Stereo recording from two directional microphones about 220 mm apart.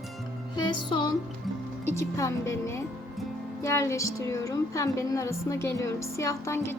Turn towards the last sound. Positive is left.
turn(degrees=10)  # may be behind; listen again after turning